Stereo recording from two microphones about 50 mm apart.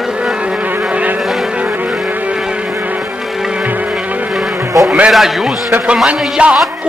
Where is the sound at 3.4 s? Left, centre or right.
Centre.